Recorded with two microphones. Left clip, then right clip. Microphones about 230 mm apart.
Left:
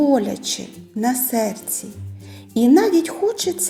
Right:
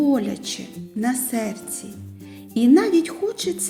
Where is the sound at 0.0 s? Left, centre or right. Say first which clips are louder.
Left 4 dB; centre.